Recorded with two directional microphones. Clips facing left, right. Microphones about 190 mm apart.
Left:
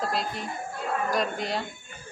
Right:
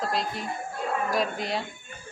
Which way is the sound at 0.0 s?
Centre (ahead or behind).